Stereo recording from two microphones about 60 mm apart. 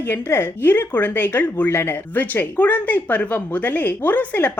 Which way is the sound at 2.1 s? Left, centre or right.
Left.